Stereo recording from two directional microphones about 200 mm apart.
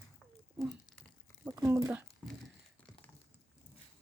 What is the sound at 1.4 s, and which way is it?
Speech, 10° right (ahead or behind).